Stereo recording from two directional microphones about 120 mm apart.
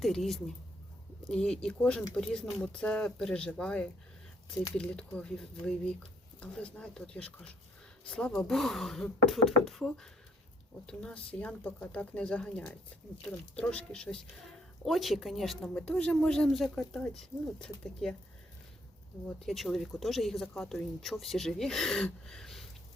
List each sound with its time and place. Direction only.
0.0 s speech: centre (ahead or behind)
19.5 s speech: centre (ahead or behind)